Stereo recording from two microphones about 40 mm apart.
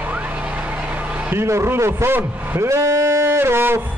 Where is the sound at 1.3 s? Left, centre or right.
Right.